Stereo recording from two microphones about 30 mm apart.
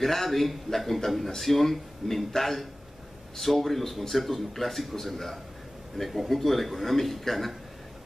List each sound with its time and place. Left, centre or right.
0.0 s a man's voice: centre